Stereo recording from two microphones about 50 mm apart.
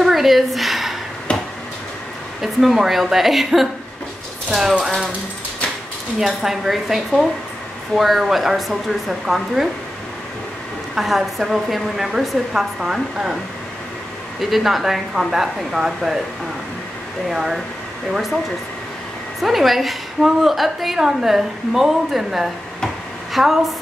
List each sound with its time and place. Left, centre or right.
0.0 s a sound: centre
1.3 s a sound: left
2.4 s a woman's voice: centre
4.5 s a woman's voice: centre
6.1 s a woman's voice: centre
11.0 s a woman's voice: centre
14.4 s a woman's voice: centre
17.3 s a woman's voice: centre
19.4 s a woman's voice: centre